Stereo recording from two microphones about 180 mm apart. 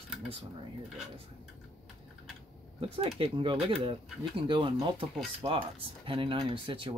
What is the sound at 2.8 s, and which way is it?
Speech, 35° right (ahead or behind).